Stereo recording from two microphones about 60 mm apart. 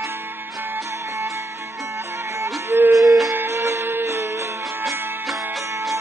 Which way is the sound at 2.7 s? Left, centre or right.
Right.